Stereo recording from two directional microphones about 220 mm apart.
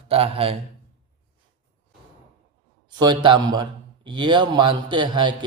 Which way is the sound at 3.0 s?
20° right (ahead or behind).